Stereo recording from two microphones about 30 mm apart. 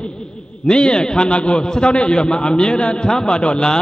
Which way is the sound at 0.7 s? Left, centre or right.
Left.